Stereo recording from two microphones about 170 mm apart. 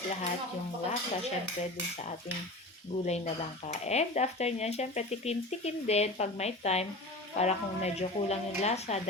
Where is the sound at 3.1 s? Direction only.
40° left (ahead or behind).